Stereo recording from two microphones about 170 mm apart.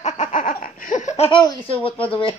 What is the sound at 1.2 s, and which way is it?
Speech, 30° left (ahead or behind).